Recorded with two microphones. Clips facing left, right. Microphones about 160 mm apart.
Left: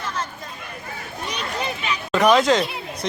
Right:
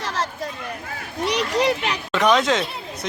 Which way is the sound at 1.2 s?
80° right.